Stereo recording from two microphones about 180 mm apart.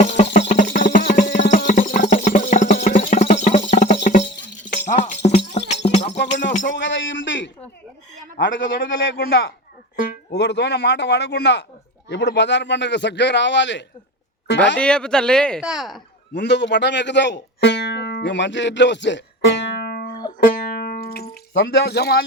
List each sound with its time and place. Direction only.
0.0 s a sound: 40° left (ahead or behind)
0.3 s music: 40° left (ahead or behind)
6.1 s music: 80° left
6.7 s a sound: 90° left
8.4 s a man's voice: 90° left
14.8 s speech: 5° left (ahead or behind)
16.3 s speech: 75° left (ahead or behind)
20.4 s music: 50° left (ahead or behind)